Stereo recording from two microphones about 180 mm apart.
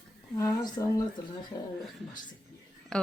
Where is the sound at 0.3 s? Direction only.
15° left (ahead or behind).